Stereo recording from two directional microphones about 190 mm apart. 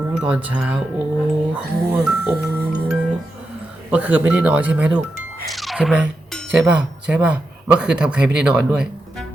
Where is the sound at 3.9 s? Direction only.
10° right (ahead or behind).